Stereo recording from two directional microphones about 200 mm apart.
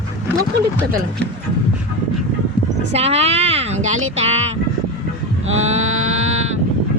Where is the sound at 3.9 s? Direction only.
90° right.